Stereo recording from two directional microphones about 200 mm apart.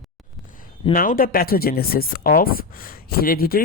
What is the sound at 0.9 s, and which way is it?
Speech, 45° left (ahead or behind).